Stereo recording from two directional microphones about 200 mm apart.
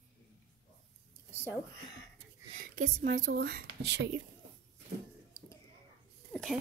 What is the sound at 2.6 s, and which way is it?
Speech, 45° right (ahead or behind).